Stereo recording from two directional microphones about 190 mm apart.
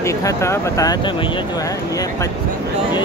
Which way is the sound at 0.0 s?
15° left (ahead or behind).